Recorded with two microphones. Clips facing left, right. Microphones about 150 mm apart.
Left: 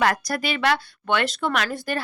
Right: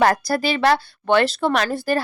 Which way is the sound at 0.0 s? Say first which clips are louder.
Right 5 dB; 35° right (ahead or behind).